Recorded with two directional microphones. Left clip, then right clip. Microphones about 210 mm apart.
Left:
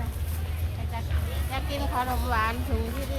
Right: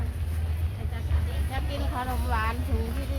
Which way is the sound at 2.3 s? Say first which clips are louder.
Left 2 dB; 30° left (ahead or behind).